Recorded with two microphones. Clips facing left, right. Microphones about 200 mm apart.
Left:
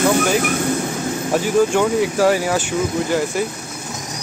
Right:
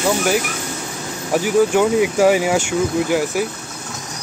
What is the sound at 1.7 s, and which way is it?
Speech, 15° right (ahead or behind).